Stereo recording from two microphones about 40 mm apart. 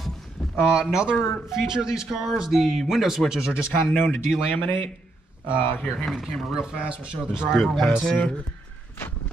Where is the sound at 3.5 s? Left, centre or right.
Left.